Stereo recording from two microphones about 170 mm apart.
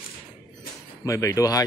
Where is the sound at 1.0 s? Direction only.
20° left (ahead or behind).